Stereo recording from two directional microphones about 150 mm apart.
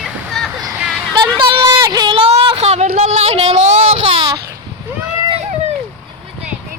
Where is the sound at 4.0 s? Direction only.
35° right (ahead or behind).